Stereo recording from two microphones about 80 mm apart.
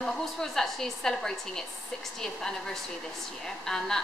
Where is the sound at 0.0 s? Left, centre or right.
Centre.